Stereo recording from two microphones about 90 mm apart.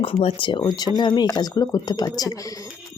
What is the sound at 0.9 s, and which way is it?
Speech, 55° left (ahead or behind).